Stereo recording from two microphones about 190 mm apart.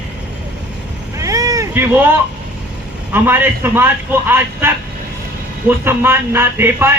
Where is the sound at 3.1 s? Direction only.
10° right (ahead or behind).